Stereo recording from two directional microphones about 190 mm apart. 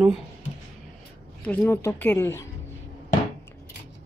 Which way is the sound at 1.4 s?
5° left (ahead or behind).